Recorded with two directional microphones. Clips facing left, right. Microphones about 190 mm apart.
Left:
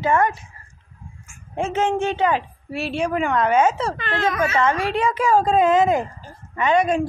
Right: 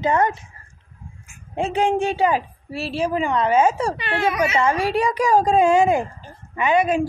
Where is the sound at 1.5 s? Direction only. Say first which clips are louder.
Right 1 dB; 15° right (ahead or behind).